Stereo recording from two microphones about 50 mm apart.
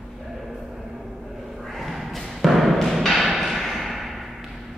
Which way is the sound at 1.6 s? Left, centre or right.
Centre.